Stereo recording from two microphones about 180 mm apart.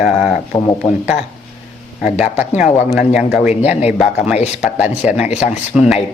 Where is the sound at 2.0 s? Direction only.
5° right (ahead or behind).